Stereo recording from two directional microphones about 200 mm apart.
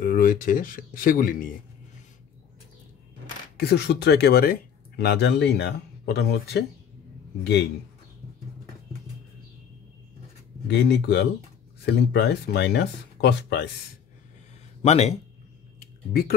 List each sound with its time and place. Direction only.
0.0 s speech: 45° left (ahead or behind)
3.5 s speech: 55° left (ahead or behind)
10.7 s speech: 55° left (ahead or behind)
14.8 s speech: 30° left (ahead or behind)
16.1 s speech: 50° left (ahead or behind)